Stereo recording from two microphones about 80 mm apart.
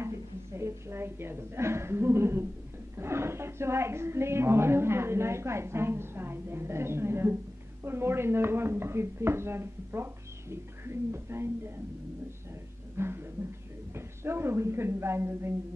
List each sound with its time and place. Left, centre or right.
0.6 s a woman's voice: right
12.9 s a sound: right
13.9 s a woman's voice: right